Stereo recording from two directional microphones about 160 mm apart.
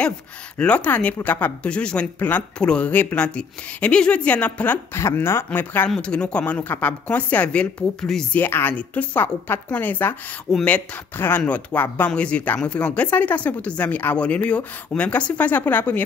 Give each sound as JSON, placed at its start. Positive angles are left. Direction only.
{"t": 0.6, "sound": "speech", "side_deg": 10}